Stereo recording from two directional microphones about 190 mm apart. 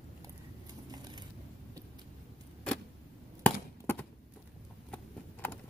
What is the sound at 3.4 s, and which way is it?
Chop, 10° left (ahead or behind).